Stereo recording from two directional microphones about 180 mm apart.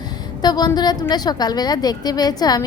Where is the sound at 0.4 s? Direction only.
20° left (ahead or behind).